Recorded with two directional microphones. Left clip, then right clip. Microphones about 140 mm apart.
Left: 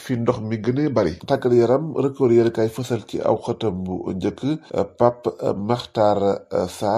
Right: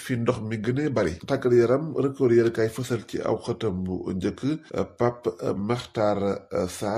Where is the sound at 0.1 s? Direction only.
30° left (ahead or behind).